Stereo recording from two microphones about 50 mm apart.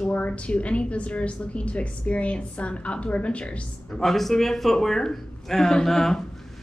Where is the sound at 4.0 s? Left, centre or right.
Centre.